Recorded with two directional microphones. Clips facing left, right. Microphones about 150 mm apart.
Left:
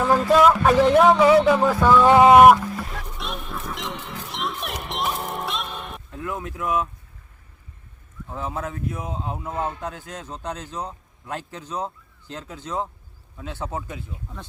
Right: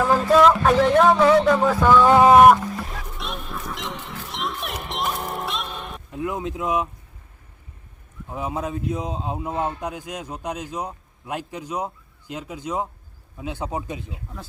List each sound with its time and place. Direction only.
0.1 s speech: 5° left (ahead or behind)
1.2 s fowl: 5° left (ahead or behind)
6.1 s speech: 20° right (ahead or behind)
8.3 s speech: 15° right (ahead or behind)